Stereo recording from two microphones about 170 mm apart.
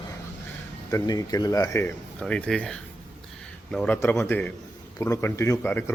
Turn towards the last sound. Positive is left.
turn(degrees=15)  # may be behind; listen again after turning